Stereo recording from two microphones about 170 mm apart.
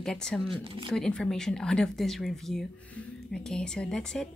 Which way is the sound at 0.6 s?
30° right (ahead or behind).